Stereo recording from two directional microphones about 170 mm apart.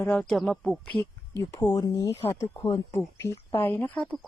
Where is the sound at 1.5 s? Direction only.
20° left (ahead or behind).